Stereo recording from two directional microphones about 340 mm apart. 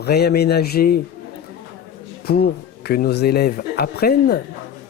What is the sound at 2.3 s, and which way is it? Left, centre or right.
Speech, left.